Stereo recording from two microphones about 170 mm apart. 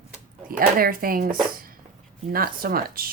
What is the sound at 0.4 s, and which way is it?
Speech, 55° right (ahead or behind).